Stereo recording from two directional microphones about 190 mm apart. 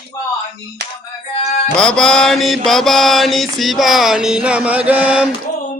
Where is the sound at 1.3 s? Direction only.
40° left (ahead or behind).